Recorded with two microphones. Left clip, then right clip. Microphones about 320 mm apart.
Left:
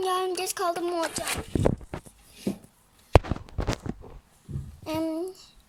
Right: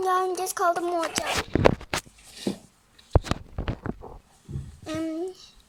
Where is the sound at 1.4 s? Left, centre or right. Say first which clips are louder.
Right 9 dB; right.